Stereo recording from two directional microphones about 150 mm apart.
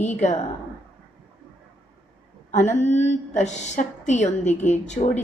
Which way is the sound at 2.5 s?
50° left (ahead or behind).